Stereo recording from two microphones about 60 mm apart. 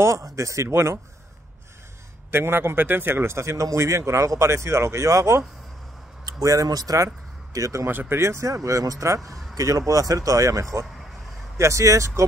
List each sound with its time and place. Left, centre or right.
0.0 s speech: right
2.3 s a man's voice: right
6.2 s speech: right
7.5 s speech: right
7.9 s a man's voice: right
8.2 s speech: right
8.6 s speech: right
9.0 s speech: right